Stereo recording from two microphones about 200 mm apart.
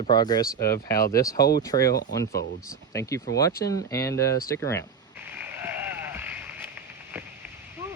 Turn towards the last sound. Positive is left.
turn(degrees=-10)  # may be behind; listen again after turning